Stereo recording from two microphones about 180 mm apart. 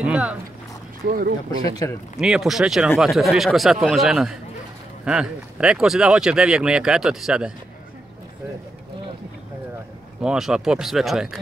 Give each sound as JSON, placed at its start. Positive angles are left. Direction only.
{"t": 0.0, "sound": "a sound", "side_deg": -5}
{"t": 1.0, "sound": "speech", "side_deg": -55}
{"t": 1.8, "sound": "speech", "side_deg": 15}
{"t": 2.1, "sound": "speech", "side_deg": 0}
{"t": 10.2, "sound": "speech", "side_deg": -5}